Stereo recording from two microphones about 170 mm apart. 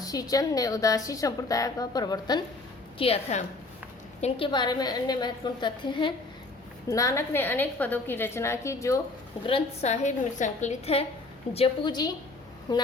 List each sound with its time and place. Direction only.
0.0 s a woman's voice: 20° left (ahead or behind)
3.0 s a woman's voice: 35° left (ahead or behind); by 9.0 s 15° left (ahead or behind)
9.5 s a woman's voice: 35° left (ahead or behind)